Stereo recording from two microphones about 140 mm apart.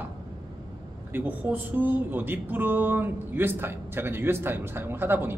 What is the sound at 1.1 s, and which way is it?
Speech, 15° right (ahead or behind).